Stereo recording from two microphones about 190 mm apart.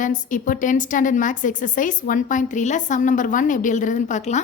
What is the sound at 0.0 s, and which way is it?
A woman's voice, 45° left (ahead or behind).